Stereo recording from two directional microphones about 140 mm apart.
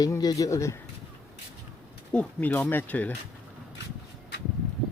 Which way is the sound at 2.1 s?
10° left (ahead or behind).